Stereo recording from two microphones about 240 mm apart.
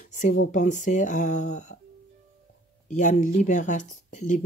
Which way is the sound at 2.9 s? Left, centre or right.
Left.